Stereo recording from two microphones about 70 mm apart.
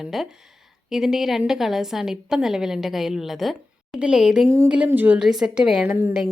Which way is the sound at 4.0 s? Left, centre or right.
Centre.